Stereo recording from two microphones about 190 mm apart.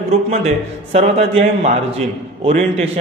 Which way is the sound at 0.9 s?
35° right (ahead or behind).